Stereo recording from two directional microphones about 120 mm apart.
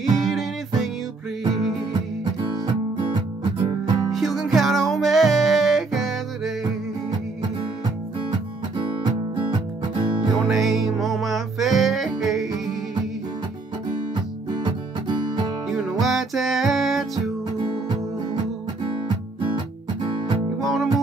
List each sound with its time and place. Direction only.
0.2 s music: centre (ahead or behind)
2.6 s music: 40° right (ahead or behind)
4.1 s music: centre (ahead or behind)
9.5 s music: 40° right (ahead or behind)
10.3 s music: centre (ahead or behind)
14.5 s music: 40° right (ahead or behind)
15.7 s music: centre (ahead or behind)
17.6 s music: 40° right (ahead or behind)
20.6 s music: centre (ahead or behind)